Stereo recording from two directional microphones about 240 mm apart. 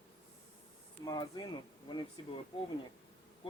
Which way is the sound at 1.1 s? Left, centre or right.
Centre.